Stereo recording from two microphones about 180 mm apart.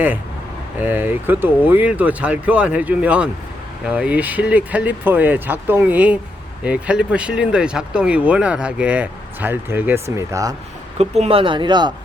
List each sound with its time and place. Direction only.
0.8 s speech: 10° right (ahead or behind)
10.9 s speech: 35° right (ahead or behind)